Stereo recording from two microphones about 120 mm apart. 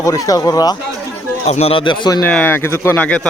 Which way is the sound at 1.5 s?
60° left (ahead or behind).